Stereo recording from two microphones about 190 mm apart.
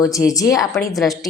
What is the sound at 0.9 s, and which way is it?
Speech, centre (ahead or behind).